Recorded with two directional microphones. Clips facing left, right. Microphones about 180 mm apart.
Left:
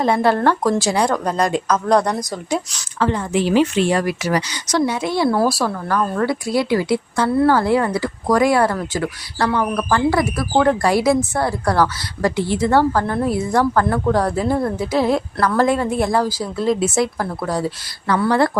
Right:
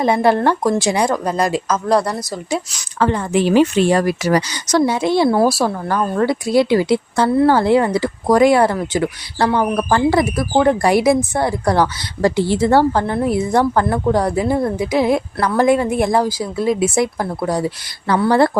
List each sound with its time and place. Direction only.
0.0 s a woman's voice: 15° right (ahead or behind)
3.0 s speech: 55° right (ahead or behind)
4.9 s speech: 25° right (ahead or behind)
12.4 s a woman's voice: 30° right (ahead or behind)
18.1 s a woman's voice: 30° right (ahead or behind)